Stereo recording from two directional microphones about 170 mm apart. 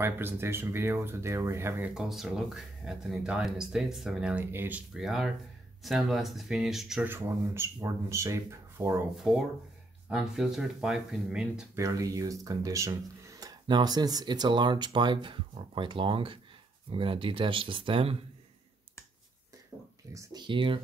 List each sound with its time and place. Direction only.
0.0 s speech: 15° right (ahead or behind)
2.0 s speech: 5° right (ahead or behind)
9.1 s speech: centre (ahead or behind)
11.7 s speech: 20° right (ahead or behind)
20.2 s speech: 25° right (ahead or behind)